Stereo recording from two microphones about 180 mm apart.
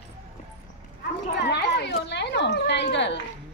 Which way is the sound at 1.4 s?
70° left (ahead or behind).